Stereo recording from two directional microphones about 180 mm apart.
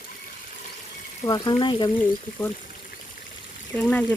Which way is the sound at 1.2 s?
25° left (ahead or behind).